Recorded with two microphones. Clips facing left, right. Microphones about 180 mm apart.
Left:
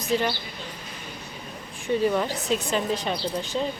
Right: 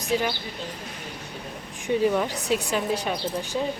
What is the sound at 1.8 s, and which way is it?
Speech, 15° right (ahead or behind).